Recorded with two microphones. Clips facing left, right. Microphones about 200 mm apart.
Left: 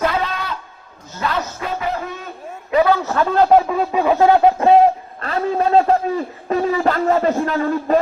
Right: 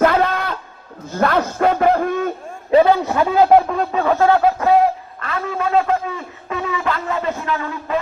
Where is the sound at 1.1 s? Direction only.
55° right (ahead or behind).